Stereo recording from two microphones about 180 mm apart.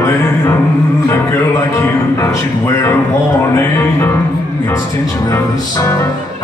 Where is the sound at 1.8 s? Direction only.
15° left (ahead or behind).